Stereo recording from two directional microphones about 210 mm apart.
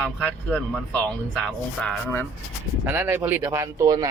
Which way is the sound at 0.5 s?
5° left (ahead or behind).